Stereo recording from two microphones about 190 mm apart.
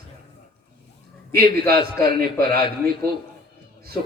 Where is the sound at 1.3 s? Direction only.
55° right (ahead or behind).